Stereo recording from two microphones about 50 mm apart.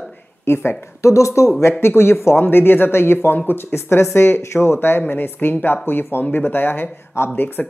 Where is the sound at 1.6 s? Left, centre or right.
Left.